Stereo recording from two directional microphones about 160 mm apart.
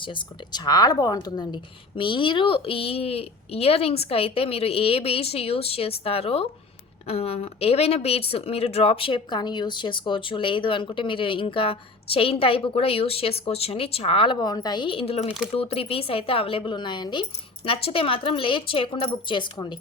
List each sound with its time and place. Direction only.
0.0 s speech: 30° left (ahead or behind)